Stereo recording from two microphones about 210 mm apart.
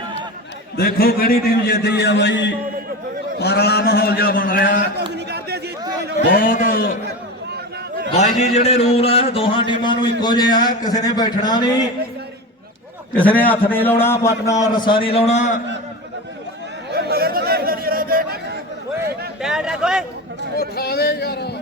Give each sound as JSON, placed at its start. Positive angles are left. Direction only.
{"t": 0.8, "sound": "a man's voice", "side_deg": 45}
{"t": 5.1, "sound": "a sound", "side_deg": -50}
{"t": 6.3, "sound": "a man's voice", "side_deg": 40}
{"t": 8.1, "sound": "a man's voice", "side_deg": 35}
{"t": 13.1, "sound": "a man's voice", "side_deg": 5}
{"t": 16.9, "sound": "chatter", "side_deg": -50}
{"t": 19.4, "sound": "speech", "side_deg": -5}
{"t": 20.6, "sound": "a man's voice", "side_deg": 45}